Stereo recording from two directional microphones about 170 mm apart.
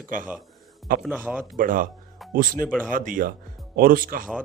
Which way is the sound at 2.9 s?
55° right (ahead or behind).